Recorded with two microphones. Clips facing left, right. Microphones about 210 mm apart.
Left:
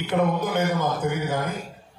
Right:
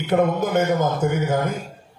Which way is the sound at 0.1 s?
45° right (ahead or behind).